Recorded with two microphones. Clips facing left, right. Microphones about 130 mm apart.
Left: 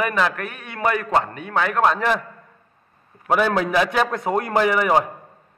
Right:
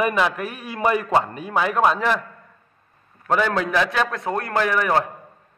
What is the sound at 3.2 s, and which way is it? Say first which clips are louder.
A man's voice: left 2 dB; 10° left (ahead or behind).